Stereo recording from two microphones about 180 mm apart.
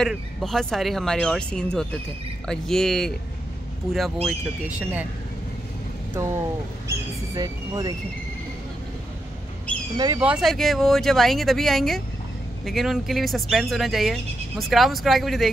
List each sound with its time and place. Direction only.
0.0 s speech: centre (ahead or behind)
7.3 s speech: 20° right (ahead or behind)
9.9 s speech: 20° right (ahead or behind)
10.2 s speech: centre (ahead or behind)